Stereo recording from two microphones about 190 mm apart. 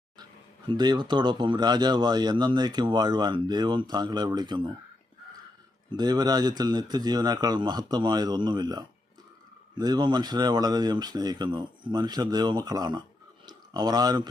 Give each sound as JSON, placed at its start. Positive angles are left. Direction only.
{"t": 0.7, "sound": "speech", "side_deg": -20}
{"t": 5.9, "sound": "speech", "side_deg": -20}
{"t": 13.4, "sound": "a sound", "side_deg": -20}